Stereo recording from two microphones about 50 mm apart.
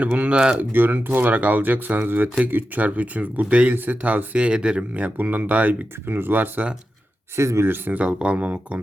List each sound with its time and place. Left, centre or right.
0.0 s speech: right
4.4 s speech: centre
6.1 s speech: right
7.3 s speech: right
7.6 s speech: right
7.9 s speech: right